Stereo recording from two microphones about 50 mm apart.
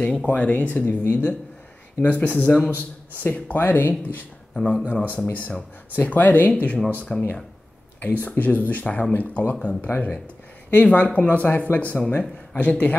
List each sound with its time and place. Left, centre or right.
0.0 s speech: centre
0.3 s speech: left
3.3 s speech: left
5.0 s speech: left
7.1 s speech: centre
8.0 s speech: left
9.6 s speech: left